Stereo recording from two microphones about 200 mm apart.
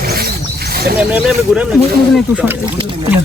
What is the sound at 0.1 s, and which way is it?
Wild animals, 50° right (ahead or behind).